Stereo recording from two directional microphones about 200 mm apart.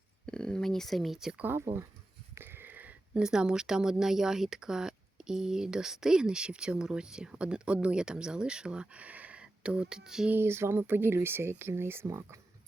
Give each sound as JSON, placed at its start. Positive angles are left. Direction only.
{"t": 0.3, "sound": "speech", "side_deg": 5}